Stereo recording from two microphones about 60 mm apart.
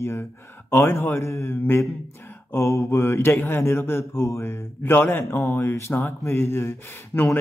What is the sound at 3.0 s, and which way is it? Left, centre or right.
Mantra, left.